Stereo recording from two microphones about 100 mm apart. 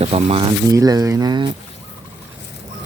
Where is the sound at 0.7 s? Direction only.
35° right (ahead or behind).